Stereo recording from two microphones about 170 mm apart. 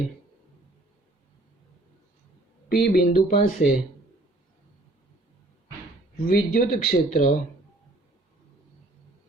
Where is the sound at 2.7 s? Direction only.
60° left (ahead or behind).